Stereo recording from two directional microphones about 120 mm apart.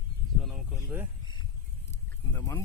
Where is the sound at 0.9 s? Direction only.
10° right (ahead or behind).